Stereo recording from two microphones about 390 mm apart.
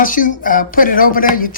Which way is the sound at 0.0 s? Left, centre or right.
Left.